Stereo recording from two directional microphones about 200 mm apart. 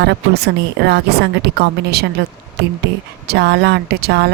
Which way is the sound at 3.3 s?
55° right (ahead or behind).